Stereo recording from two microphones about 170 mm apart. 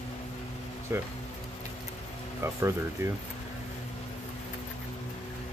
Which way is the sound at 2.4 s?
15° right (ahead or behind).